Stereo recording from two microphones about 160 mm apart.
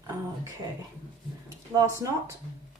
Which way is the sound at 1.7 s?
20° right (ahead or behind).